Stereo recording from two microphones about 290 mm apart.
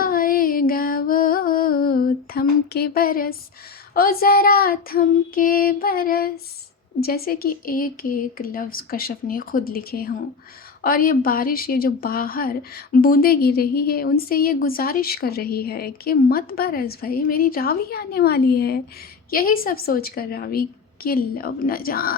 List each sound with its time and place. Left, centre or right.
0.0 s music: left
3.9 s a woman's voice: left